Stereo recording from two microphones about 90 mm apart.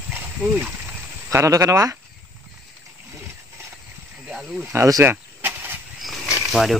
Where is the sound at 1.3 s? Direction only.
35° right (ahead or behind).